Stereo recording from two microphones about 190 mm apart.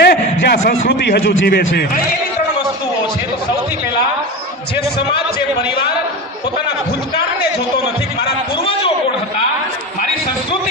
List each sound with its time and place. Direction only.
0.0 s a sound: 60° left (ahead or behind)
0.9 s a man's voice: 60° left (ahead or behind)
8.5 s a man's voice: 30° left (ahead or behind)